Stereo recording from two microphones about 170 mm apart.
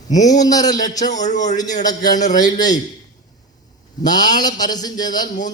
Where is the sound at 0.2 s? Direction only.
20° left (ahead or behind).